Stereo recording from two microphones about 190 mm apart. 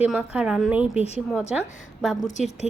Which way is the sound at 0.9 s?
35° left (ahead or behind).